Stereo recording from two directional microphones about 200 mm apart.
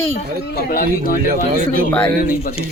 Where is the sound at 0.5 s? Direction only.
45° left (ahead or behind).